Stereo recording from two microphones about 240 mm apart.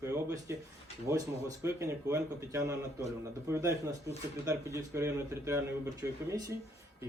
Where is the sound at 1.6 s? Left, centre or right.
Centre.